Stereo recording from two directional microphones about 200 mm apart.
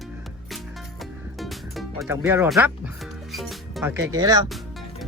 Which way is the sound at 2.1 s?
10° right (ahead or behind).